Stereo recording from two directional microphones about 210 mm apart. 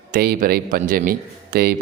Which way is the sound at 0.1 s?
45° right (ahead or behind).